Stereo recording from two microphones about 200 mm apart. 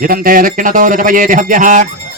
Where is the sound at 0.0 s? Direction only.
45° right (ahead or behind).